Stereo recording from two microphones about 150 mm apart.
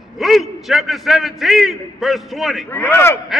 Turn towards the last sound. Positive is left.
turn(degrees=15)  # may be behind; listen again after turning